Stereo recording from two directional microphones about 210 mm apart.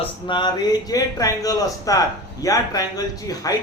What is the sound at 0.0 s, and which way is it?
A man's voice, 20° left (ahead or behind).